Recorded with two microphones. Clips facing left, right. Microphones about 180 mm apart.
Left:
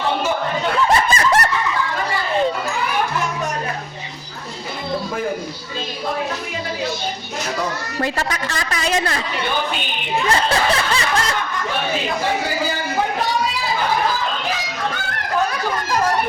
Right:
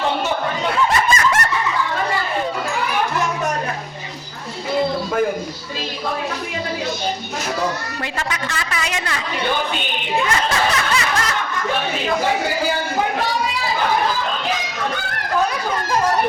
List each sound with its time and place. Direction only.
1.1 s snicker: 35° left (ahead or behind)
8.0 s a woman's voice: 40° left (ahead or behind)
10.2 s snicker: 30° left (ahead or behind)